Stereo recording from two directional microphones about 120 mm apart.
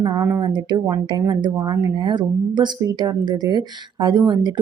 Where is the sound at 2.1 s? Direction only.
40° right (ahead or behind).